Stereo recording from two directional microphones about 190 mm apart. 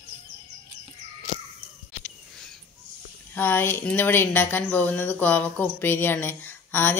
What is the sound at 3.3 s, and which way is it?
Speech, 10° left (ahead or behind).